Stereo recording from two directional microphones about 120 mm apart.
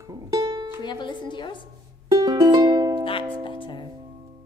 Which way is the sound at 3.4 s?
40° left (ahead or behind).